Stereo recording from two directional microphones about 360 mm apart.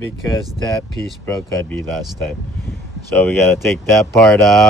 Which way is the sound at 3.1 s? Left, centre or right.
Centre.